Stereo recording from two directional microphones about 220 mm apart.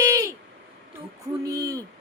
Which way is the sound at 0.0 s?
15° right (ahead or behind).